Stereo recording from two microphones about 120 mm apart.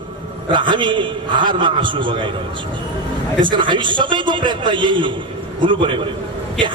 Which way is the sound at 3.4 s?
40° right (ahead or behind).